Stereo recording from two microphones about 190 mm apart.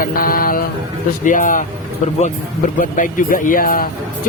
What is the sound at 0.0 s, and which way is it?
Mantra, 50° left (ahead or behind).